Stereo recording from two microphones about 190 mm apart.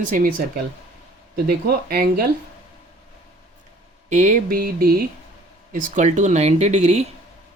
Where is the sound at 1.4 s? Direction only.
55° right (ahead or behind).